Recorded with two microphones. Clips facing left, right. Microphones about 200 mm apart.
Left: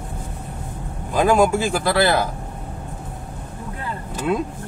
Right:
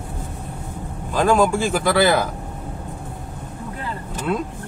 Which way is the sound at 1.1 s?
10° left (ahead or behind).